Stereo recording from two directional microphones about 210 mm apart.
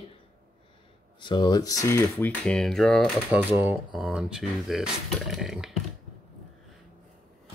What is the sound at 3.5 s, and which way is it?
Speech, 5° right (ahead or behind).